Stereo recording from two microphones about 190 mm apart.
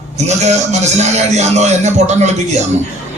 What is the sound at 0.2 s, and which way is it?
A man's voice, 35° right (ahead or behind).